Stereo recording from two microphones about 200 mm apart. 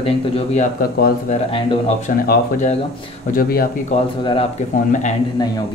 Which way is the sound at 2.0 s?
40° left (ahead or behind).